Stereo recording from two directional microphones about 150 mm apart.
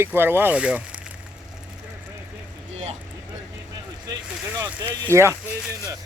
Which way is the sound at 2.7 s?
45° right (ahead or behind).